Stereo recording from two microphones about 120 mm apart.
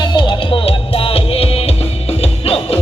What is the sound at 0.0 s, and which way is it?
Music, 40° left (ahead or behind).